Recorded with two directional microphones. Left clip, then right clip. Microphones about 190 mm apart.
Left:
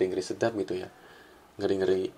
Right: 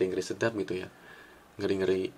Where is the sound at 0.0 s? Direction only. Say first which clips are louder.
Left 1 dB; 15° right (ahead or behind).